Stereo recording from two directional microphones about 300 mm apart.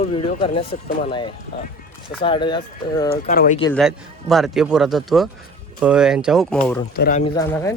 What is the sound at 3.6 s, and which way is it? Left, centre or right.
A man's voice, centre.